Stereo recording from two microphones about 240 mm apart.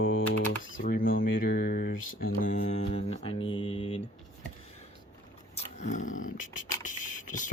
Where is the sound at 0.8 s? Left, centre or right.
Left.